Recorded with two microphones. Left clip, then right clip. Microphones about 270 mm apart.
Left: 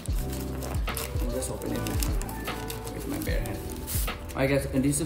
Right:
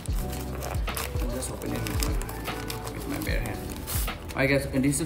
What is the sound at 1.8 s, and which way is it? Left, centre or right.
Speech, centre.